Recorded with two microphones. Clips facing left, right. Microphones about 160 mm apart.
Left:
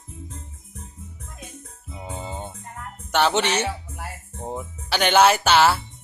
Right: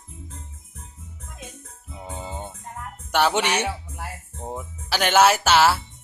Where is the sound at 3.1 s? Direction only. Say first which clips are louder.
Even; 5° right (ahead or behind).